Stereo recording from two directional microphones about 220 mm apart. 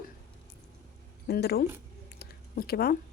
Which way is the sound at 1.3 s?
45° left (ahead or behind).